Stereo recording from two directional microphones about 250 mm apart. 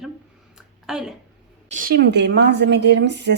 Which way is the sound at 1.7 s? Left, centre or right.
Right.